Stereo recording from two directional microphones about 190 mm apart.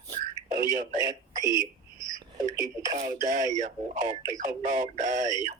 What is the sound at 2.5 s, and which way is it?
Speech, 15° right (ahead or behind).